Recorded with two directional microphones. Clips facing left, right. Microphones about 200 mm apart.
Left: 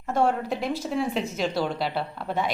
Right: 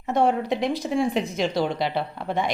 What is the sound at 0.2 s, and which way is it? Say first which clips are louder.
Speech: right 2 dB; centre (ahead or behind).